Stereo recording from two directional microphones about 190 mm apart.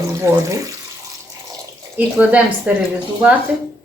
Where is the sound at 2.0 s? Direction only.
10° right (ahead or behind).